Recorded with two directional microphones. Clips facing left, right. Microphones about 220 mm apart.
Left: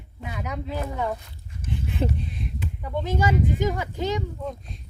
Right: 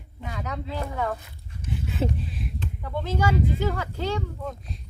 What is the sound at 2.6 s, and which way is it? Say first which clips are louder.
Speech: left 3 dB; 10° left (ahead or behind).